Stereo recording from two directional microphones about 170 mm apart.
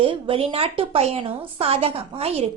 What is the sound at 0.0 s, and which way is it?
A woman's voice, 30° right (ahead or behind).